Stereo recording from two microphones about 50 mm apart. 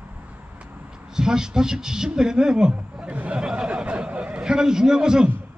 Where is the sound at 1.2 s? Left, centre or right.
Centre.